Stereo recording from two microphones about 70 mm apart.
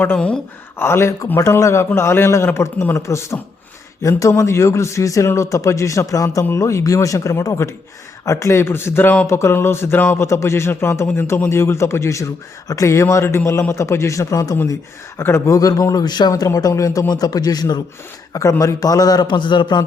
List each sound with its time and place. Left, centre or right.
0.8 s a man's voice: left
15.2 s a man's voice: left
15.5 s a man's voice: left
16.3 s a man's voice: left
17.1 s a man's voice: left
18.6 s a man's voice: left